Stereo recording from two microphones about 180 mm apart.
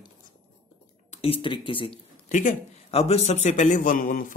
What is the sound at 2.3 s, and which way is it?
A man's voice, 45° left (ahead or behind).